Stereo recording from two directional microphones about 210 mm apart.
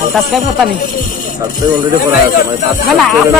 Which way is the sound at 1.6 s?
20° right (ahead or behind).